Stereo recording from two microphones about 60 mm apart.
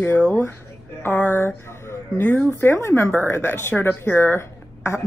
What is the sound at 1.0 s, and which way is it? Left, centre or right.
Speech, left.